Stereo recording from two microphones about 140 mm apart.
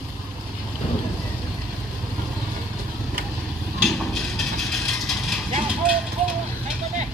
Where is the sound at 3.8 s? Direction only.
Centre (ahead or behind).